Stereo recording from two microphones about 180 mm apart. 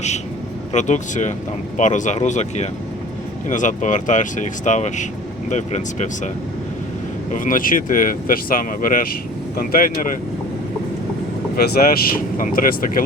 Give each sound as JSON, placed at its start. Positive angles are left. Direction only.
{"t": 0.7, "sound": "speech", "side_deg": 40}
{"t": 7.3, "sound": "speech", "side_deg": 50}
{"t": 11.5, "sound": "speech", "side_deg": 60}